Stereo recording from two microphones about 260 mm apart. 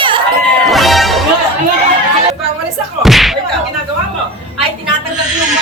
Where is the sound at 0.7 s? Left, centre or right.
Centre.